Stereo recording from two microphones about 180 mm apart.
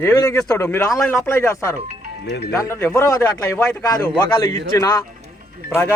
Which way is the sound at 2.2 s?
70° left (ahead or behind).